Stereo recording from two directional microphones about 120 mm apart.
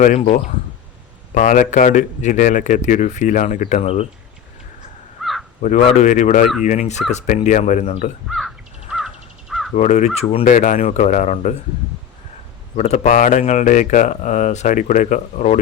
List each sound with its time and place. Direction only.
0.0 s speech: 70° left (ahead or behind)
1.3 s speech: 90° left; by 4.0 s 60° left (ahead or behind)
5.2 s caw: centre (ahead or behind)
5.6 s speech: 90° left
6.7 s speech: 75° left (ahead or behind)
8.3 s crow: centre (ahead or behind)
9.7 s speech: 75° left (ahead or behind)
12.7 s speech: 65° left (ahead or behind); by 15.5 s 85° left